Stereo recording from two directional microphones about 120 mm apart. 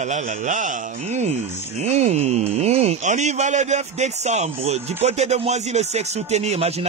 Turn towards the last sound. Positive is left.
turn(degrees=-60)  # may be behind; listen again after turning